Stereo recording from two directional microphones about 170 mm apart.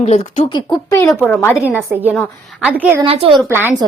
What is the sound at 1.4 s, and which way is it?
Speech, 10° left (ahead or behind).